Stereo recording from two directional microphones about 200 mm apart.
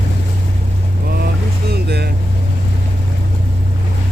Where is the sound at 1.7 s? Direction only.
55° right (ahead or behind).